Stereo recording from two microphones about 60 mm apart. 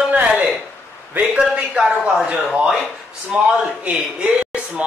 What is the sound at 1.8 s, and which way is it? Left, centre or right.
Speech, centre.